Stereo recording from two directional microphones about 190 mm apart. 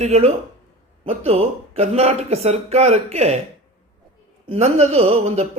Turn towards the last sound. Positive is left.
turn(degrees=-35)  # may be behind; listen again after turning